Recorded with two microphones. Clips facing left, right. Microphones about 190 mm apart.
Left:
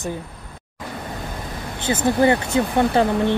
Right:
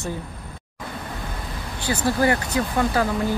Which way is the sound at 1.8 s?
20° left (ahead or behind).